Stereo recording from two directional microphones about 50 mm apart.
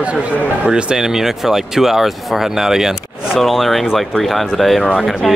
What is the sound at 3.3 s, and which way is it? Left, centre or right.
Speech, centre.